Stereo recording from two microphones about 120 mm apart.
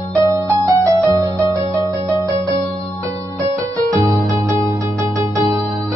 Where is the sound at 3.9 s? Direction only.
25° right (ahead or behind).